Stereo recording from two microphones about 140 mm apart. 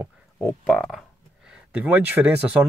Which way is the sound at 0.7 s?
5° left (ahead or behind).